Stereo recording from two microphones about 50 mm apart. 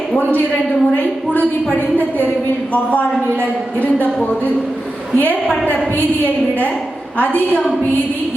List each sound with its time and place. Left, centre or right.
0.2 s a woman's voice: left
5.1 s a woman's voice: left
7.2 s a woman's voice: left